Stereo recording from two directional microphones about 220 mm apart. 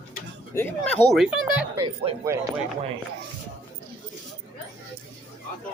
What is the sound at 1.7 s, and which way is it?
Speech, 20° right (ahead or behind).